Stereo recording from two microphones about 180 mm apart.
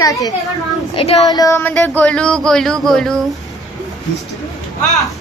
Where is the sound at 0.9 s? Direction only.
35° left (ahead or behind).